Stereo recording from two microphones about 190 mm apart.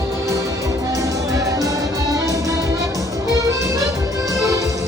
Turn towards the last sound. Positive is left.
turn(degrees=-15)  # may be behind; listen again after turning